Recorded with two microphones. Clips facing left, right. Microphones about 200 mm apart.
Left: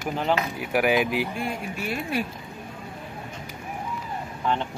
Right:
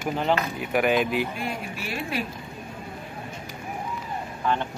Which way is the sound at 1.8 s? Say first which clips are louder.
Left 4 dB; 50° left (ahead or behind).